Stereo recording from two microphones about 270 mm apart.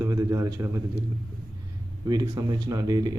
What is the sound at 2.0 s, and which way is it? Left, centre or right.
Speech, centre.